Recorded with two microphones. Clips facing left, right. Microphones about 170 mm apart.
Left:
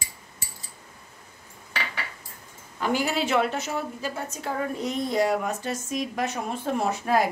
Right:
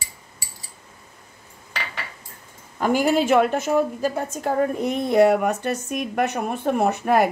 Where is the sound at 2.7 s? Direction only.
50° right (ahead or behind).